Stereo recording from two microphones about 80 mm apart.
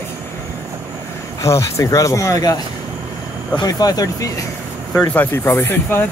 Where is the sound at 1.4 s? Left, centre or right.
Left.